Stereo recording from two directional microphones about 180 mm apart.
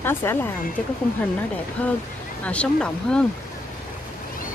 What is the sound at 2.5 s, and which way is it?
Speech, 5° left (ahead or behind).